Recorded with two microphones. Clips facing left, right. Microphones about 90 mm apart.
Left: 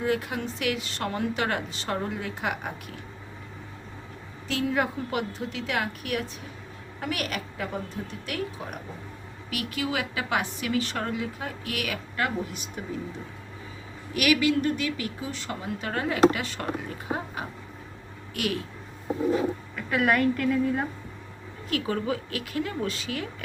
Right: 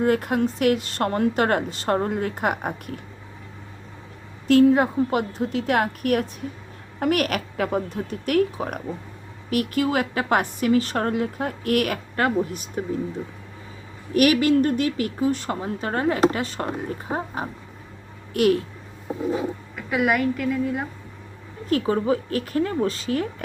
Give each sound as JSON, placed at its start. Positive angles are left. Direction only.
{"t": 0.0, "sound": "speech", "side_deg": -50}
{"t": 4.4, "sound": "a woman's voice", "side_deg": -50}
{"t": 4.7, "sound": "a woman's voice", "side_deg": -35}
{"t": 9.5, "sound": "speech", "side_deg": -45}
{"t": 14.1, "sound": "a woman's voice", "side_deg": -40}
{"t": 19.7, "sound": "a woman's voice", "side_deg": -10}
{"t": 21.7, "sound": "a woman's voice", "side_deg": -35}